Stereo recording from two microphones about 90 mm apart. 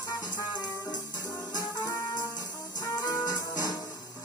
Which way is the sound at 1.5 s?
45° left (ahead or behind).